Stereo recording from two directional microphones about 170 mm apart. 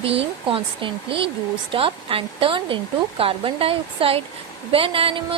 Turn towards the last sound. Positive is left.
turn(degrees=-30)  # may be behind; listen again after turning